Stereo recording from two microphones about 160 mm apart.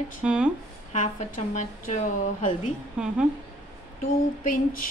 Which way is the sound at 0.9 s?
50° left (ahead or behind).